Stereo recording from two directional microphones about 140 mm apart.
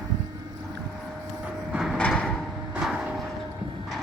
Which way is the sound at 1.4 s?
5° right (ahead or behind).